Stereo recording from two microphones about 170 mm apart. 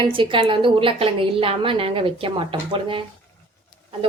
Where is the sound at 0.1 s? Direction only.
30° right (ahead or behind).